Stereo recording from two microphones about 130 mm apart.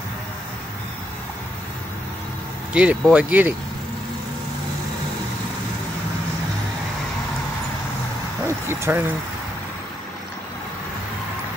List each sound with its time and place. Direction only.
2.7 s speech: 10° right (ahead or behind)
8.5 s speech: 20° right (ahead or behind)